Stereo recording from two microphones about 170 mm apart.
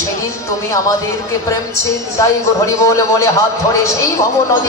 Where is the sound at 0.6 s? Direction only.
20° left (ahead or behind).